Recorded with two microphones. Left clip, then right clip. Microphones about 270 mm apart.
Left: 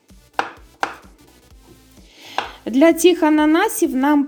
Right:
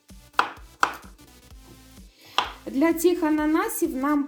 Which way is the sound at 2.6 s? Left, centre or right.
Left.